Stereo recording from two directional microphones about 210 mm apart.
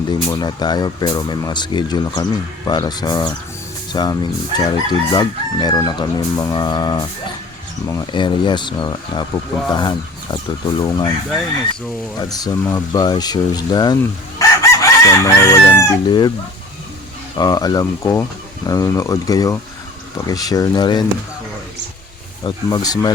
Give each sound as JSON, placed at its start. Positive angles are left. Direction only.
{"t": 0.1, "sound": "chicken", "side_deg": 20}
{"t": 12.2, "sound": "speech", "side_deg": 20}
{"t": 17.3, "sound": "speech", "side_deg": 20}
{"t": 22.4, "sound": "speech", "side_deg": 20}